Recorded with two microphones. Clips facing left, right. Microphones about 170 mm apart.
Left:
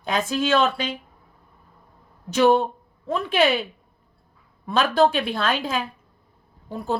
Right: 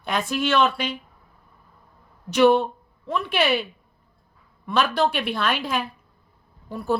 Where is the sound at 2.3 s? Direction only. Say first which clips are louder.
Right 1 dB; 45° left (ahead or behind).